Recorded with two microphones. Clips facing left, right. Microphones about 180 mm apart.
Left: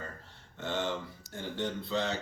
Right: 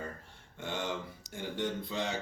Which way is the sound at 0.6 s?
15° right (ahead or behind).